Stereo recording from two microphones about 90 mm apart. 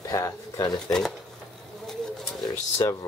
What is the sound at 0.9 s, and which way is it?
Speech, 5° left (ahead or behind).